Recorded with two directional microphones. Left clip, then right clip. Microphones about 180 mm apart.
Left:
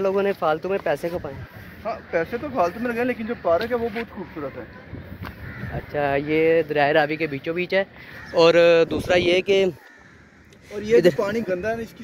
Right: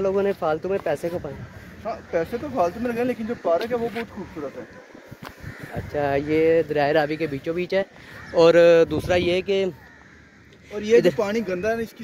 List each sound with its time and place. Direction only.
0.0 s speech: 10° right (ahead or behind)
3.4 s speech: 10° left (ahead or behind)
5.9 s speech: 25° right (ahead or behind)
9.0 s speech: 5° left (ahead or behind)
9.3 s speech: 25° left (ahead or behind)
11.1 s speech: 45° right (ahead or behind)